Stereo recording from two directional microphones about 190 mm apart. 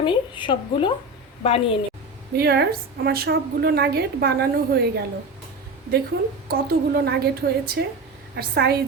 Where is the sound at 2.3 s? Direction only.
55° right (ahead or behind).